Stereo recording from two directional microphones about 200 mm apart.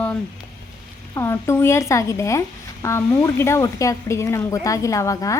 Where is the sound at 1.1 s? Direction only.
15° left (ahead or behind).